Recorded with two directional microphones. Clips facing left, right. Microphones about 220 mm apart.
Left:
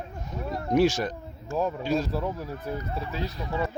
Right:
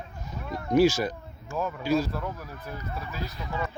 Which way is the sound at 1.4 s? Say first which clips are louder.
Left 4 dB; 35° left (ahead or behind).